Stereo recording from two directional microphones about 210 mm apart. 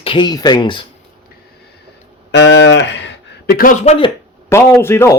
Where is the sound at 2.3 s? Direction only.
55° left (ahead or behind); by 4.1 s 25° left (ahead or behind).